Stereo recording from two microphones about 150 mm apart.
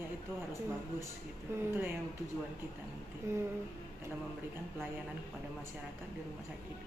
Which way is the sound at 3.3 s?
20° right (ahead or behind).